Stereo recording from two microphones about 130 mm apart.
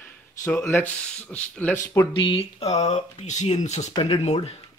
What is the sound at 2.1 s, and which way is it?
Speech, 40° left (ahead or behind).